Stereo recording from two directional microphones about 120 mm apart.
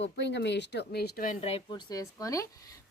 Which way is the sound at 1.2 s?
55° left (ahead or behind).